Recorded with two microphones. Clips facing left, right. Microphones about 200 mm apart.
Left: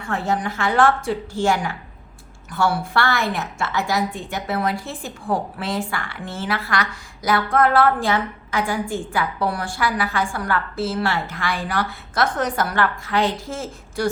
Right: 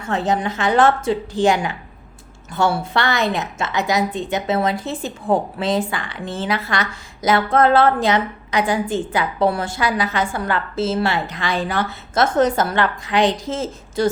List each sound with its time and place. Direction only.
0.1 s a woman's voice: 20° right (ahead or behind)